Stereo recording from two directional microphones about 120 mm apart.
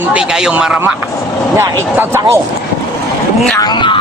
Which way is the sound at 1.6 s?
20° right (ahead or behind).